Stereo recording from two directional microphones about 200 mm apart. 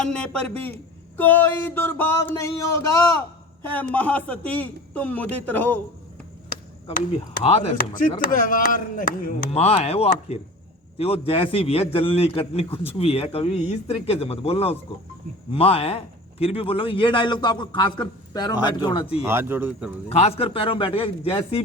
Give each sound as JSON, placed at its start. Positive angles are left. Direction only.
{"t": 0.0, "sound": "a man's voice", "side_deg": 5}
{"t": 1.1, "sound": "a sound", "side_deg": 10}
{"t": 3.6, "sound": "a man's voice", "side_deg": 10}
{"t": 3.9, "sound": "a sound", "side_deg": 5}
{"t": 7.4, "sound": "speech", "side_deg": 30}
{"t": 7.8, "sound": "speech", "side_deg": 45}
{"t": 9.5, "sound": "a man's voice", "side_deg": 30}
{"t": 19.2, "sound": "speech", "side_deg": -10}
{"t": 20.1, "sound": "a man's voice", "side_deg": 30}